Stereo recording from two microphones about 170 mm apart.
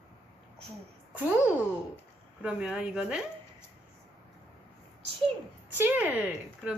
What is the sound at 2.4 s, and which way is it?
Speech, 5° right (ahead or behind).